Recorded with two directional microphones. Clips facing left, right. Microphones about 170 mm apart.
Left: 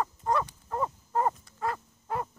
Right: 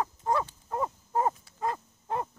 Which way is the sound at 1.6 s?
20° right (ahead or behind).